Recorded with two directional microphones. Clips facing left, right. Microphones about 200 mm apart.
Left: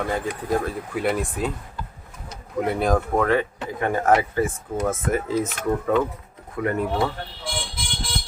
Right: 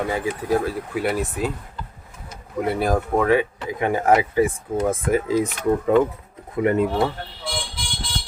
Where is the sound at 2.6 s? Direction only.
5° right (ahead or behind); by 6.9 s 20° right (ahead or behind).